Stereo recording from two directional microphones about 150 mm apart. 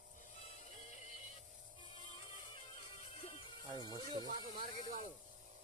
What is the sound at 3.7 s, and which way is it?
Speech, 25° right (ahead or behind).